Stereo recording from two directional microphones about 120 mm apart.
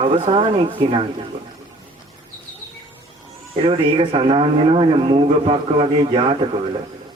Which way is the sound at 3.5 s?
50° right (ahead or behind).